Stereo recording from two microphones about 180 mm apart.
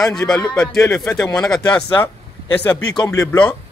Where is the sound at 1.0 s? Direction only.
20° left (ahead or behind).